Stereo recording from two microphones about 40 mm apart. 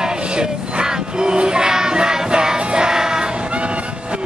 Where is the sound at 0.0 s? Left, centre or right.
Right.